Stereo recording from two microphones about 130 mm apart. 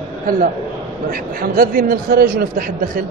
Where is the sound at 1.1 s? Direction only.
90° right.